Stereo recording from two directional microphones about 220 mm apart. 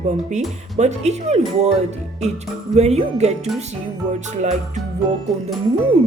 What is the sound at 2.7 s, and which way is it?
Speech, 30° right (ahead or behind).